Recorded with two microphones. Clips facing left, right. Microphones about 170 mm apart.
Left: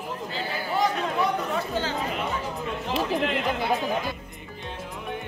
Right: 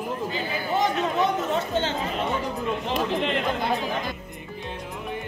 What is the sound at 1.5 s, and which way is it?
Chatter, 25° right (ahead or behind).